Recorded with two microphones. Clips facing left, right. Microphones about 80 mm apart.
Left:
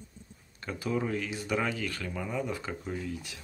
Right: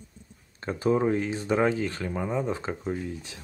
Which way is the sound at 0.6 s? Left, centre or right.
Right.